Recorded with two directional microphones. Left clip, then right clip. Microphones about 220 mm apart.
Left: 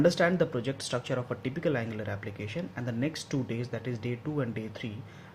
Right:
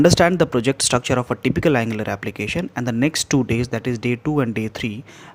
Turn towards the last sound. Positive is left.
turn(degrees=-45)  # may be behind; listen again after turning